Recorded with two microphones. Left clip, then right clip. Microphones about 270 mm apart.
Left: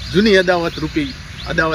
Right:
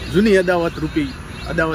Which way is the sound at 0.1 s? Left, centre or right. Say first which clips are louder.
Left 2 dB; centre.